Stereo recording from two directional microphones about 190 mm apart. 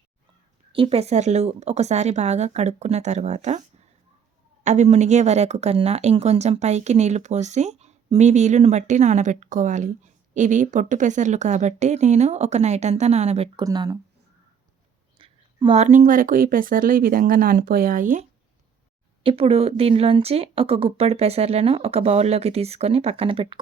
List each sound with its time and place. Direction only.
0.7 s speech: 30° right (ahead or behind)
4.6 s speech: 40° right (ahead or behind)
13.7 s speech: 20° right (ahead or behind)
15.2 s speech: 25° right (ahead or behind); by 18.2 s 45° right (ahead or behind)
19.2 s speech: 30° right (ahead or behind)